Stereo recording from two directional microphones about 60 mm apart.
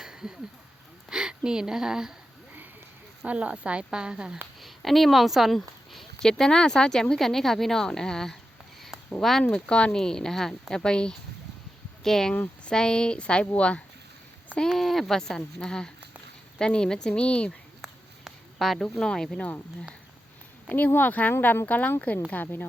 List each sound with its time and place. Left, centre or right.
0.0 s a sound: centre
1.5 s speech: centre
3.2 s speech: right
4.6 s speech: centre
9.5 s speech: centre
12.3 s speech: left
12.7 s speech: centre
14.7 s speech: centre
17.8 s a sound: centre
19.4 s speech: left
20.7 s speech: left